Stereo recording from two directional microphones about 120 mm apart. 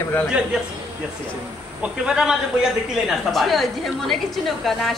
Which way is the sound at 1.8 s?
5° right (ahead or behind).